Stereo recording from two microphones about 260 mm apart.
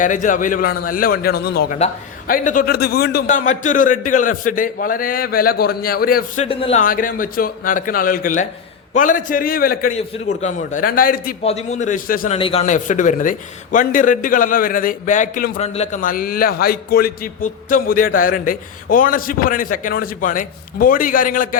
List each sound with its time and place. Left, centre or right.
0.0 s a man's voice: left
12.4 s a man's voice: left